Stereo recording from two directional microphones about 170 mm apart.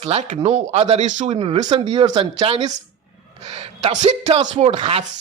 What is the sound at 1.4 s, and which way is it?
Speech, 35° right (ahead or behind).